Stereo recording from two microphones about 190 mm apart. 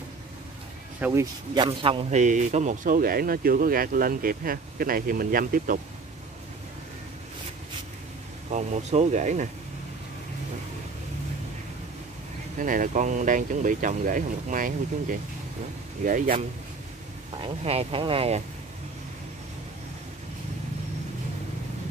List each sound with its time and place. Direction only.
1.0 s speech: 10° right (ahead or behind)
1.5 s a man's voice: 25° right (ahead or behind); by 5.8 s 45° right (ahead or behind)
8.5 s speech: 40° right (ahead or behind)
12.5 s a man's voice: 45° right (ahead or behind)
17.4 s speech: 30° right (ahead or behind)